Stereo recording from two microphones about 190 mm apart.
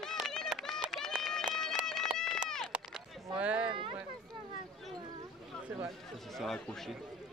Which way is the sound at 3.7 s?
25° right (ahead or behind).